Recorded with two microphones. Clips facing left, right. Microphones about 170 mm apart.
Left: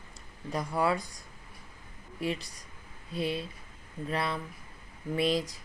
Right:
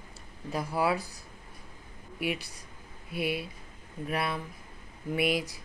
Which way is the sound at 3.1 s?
25° left (ahead or behind).